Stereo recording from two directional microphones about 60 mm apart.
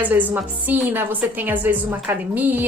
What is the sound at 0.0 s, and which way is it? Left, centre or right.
A woman's voice, right.